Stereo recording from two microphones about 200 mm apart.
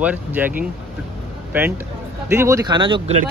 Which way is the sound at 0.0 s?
10° right (ahead or behind).